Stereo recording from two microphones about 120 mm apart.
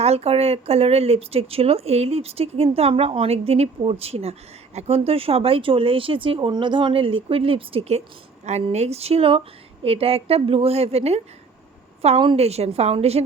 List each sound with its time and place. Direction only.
0.0 s speech: 60° right (ahead or behind)